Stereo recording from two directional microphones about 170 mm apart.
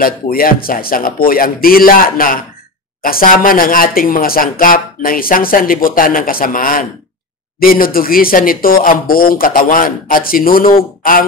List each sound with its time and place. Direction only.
0.0 s speech: 60° left (ahead or behind)